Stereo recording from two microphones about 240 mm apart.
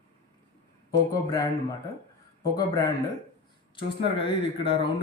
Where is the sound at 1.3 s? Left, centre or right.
Centre.